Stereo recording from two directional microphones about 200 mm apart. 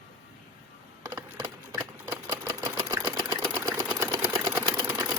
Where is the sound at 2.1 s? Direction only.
20° right (ahead or behind).